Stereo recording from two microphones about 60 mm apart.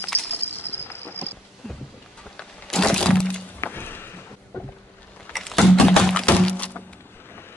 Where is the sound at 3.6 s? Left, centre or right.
Left.